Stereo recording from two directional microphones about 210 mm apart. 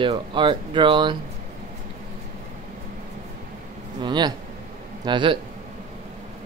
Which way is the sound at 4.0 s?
20° right (ahead or behind).